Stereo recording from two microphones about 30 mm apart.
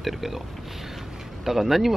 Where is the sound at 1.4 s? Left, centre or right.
Centre.